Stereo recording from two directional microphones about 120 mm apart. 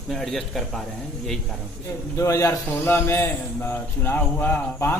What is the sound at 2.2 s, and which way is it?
A man's voice, 25° left (ahead or behind).